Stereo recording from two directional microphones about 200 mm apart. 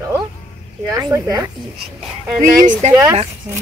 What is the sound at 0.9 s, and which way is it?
Speech, 20° right (ahead or behind).